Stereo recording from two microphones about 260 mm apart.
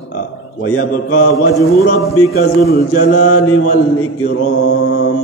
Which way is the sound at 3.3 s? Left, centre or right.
Left.